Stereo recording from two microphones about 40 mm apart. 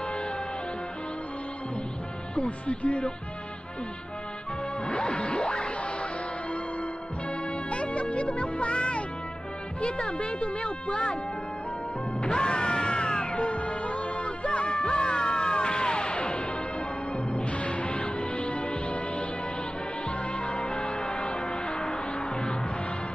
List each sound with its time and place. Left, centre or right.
2.3 s speech: left
4.8 s music: left
7.7 s music: left
9.8 s speech: left
12.2 s music: left
13.4 s music: left
17.5 s music: left